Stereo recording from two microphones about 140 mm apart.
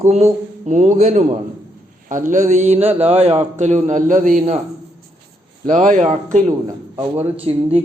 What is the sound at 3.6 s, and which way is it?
A man's voice, 60° right (ahead or behind).